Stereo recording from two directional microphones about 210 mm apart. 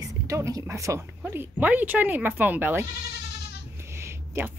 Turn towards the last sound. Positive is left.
turn(degrees=-10)  # may be behind; listen again after turning